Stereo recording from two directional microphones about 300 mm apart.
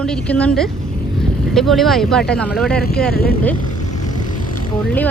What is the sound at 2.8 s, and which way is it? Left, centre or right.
Speech, left.